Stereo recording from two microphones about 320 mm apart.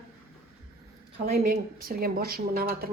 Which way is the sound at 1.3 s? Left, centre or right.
Right.